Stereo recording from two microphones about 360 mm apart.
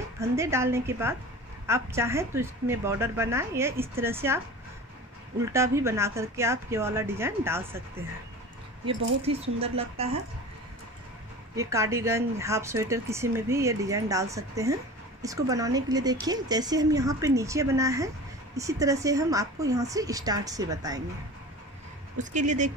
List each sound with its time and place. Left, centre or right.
0.2 s speech: centre
5.4 s speech: centre
8.8 s speech: centre
11.5 s speech: centre
22.2 s speech: centre